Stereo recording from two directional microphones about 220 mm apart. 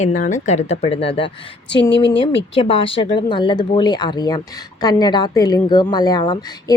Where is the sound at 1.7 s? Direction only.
50° left (ahead or behind).